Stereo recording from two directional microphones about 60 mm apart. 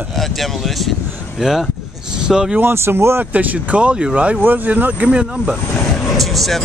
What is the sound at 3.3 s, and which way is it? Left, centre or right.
Speech, right.